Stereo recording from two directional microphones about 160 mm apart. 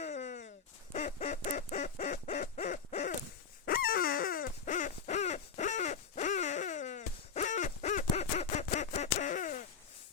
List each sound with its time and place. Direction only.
0.0 s a sound: 50° left (ahead or behind)
0.9 s quack: 45° left (ahead or behind)
2.0 s owl: 50° left (ahead or behind)
3.7 s owl: 65° left (ahead or behind)